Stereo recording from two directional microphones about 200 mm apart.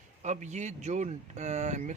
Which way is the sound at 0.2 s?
35° right (ahead or behind).